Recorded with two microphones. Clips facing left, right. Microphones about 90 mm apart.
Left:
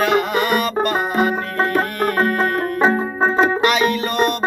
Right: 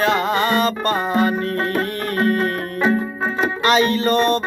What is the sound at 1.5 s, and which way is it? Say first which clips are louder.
Music: left 3 dB; 30° left (ahead or behind).